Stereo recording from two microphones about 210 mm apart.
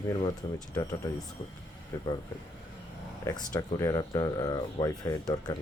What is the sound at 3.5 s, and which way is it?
Speech, 15° left (ahead or behind).